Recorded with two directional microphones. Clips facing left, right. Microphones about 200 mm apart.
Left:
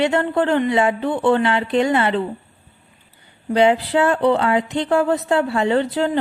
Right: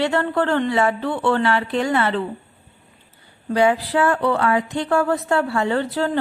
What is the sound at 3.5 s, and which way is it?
Speech, 20° left (ahead or behind).